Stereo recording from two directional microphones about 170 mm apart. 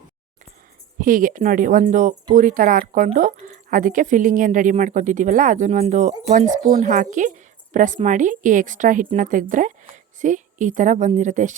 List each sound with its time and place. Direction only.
0.9 s speech: 55° right (ahead or behind)